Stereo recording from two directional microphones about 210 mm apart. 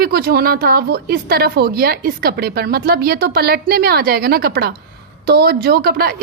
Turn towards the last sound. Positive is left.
turn(degrees=-45)  # may be behind; listen again after turning